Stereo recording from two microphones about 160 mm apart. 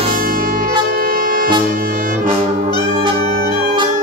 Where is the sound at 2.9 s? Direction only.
35° right (ahead or behind).